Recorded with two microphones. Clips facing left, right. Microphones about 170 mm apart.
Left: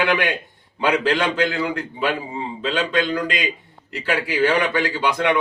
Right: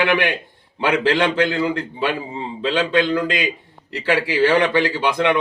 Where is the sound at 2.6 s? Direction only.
30° right (ahead or behind).